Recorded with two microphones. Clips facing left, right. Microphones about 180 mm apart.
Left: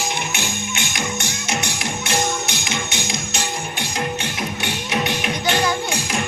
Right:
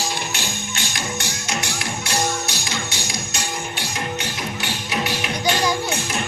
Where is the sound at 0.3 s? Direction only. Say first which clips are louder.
Left 3 dB; 20° left (ahead or behind).